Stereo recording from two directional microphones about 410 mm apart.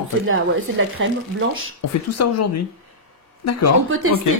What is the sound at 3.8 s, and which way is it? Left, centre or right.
Speech, right.